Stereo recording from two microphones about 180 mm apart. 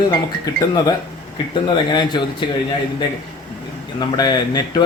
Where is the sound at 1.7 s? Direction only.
25° left (ahead or behind).